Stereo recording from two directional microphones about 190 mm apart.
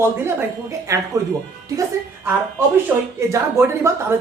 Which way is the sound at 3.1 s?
15° right (ahead or behind).